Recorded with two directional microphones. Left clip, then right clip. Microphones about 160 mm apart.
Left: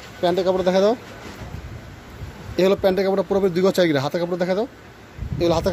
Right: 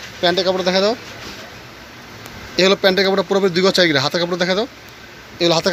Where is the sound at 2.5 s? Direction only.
5° left (ahead or behind).